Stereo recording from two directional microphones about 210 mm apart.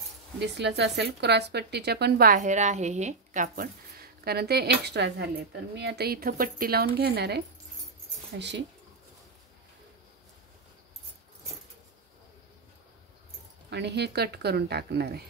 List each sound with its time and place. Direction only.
0.4 s speech: 55° right (ahead or behind)
13.7 s speech: 55° right (ahead or behind)